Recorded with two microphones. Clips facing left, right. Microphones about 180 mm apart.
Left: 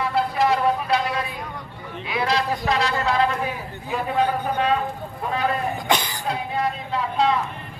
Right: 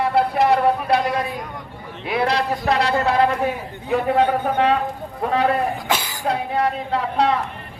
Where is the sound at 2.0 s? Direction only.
60° right (ahead or behind).